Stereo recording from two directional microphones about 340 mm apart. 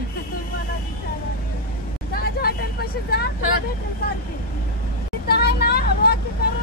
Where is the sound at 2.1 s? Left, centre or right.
Left.